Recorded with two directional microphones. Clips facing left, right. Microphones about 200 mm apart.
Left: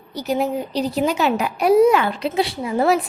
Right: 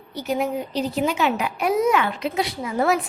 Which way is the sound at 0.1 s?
35° left (ahead or behind).